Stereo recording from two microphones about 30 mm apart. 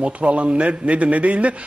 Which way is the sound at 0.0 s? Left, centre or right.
Right.